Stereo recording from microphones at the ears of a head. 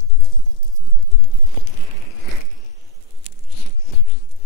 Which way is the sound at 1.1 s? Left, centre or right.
Left.